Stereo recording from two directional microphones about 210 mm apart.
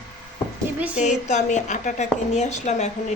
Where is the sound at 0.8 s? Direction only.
5° right (ahead or behind).